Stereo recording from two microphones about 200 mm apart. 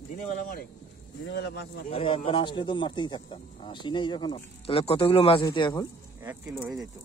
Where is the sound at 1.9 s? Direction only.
25° left (ahead or behind).